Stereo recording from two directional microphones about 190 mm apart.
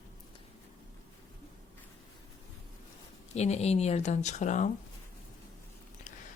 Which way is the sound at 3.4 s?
35° left (ahead or behind).